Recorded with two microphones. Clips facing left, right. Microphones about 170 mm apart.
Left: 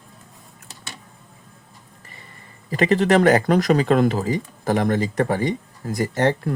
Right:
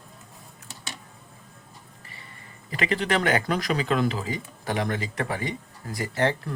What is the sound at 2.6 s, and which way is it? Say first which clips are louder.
Speech: left 8 dB; 40° left (ahead or behind).